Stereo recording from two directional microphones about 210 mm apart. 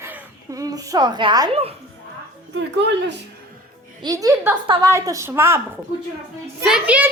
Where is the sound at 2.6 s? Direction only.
55° right (ahead or behind).